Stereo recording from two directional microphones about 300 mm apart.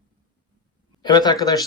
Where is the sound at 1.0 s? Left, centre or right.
Centre.